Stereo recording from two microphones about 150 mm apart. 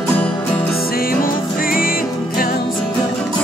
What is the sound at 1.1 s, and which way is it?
Music, 75° left (ahead or behind).